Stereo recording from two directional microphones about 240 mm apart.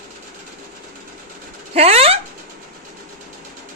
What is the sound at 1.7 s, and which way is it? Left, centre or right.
Speech, right.